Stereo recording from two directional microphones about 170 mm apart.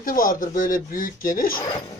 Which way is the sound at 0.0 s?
55° left (ahead or behind).